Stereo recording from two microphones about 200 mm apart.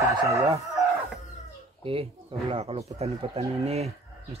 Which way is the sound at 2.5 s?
30° right (ahead or behind).